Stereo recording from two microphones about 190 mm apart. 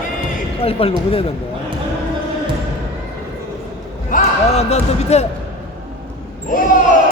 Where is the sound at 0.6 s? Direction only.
30° left (ahead or behind).